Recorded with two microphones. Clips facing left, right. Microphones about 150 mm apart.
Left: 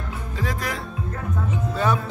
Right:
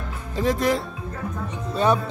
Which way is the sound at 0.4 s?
25° right (ahead or behind).